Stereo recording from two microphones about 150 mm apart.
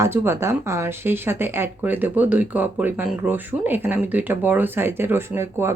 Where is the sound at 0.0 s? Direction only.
15° right (ahead or behind).